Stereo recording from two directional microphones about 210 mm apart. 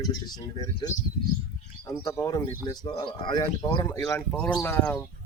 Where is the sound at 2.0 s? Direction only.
15° left (ahead or behind).